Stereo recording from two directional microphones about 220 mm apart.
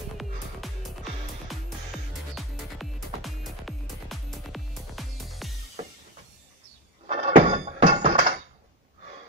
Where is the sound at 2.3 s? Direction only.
Centre (ahead or behind).